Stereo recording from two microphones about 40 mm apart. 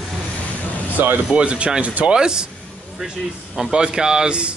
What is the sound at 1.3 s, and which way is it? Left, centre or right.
Speech, right.